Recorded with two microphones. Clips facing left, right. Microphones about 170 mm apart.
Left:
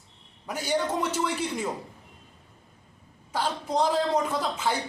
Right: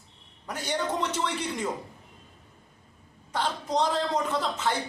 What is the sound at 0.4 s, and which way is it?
Speech, 10° left (ahead or behind).